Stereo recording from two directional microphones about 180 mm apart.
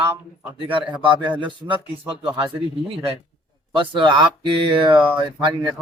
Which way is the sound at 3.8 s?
25° right (ahead or behind).